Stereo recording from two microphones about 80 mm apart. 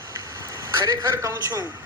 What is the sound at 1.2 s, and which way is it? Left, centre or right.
Speech, right.